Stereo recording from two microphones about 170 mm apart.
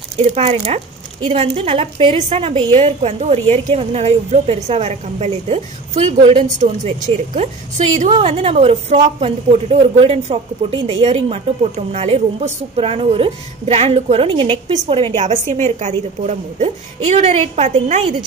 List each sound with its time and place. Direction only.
0.3 s a woman's voice: 35° right (ahead or behind)